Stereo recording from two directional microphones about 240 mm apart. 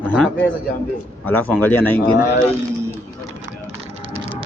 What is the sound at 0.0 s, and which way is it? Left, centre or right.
A man's voice, centre.